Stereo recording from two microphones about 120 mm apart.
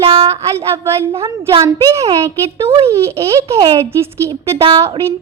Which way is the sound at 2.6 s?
55° right (ahead or behind).